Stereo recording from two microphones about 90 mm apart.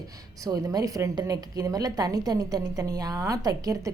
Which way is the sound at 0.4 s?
45° right (ahead or behind).